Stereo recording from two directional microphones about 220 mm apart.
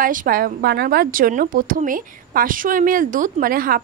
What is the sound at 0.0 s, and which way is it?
A woman's voice, 40° right (ahead or behind).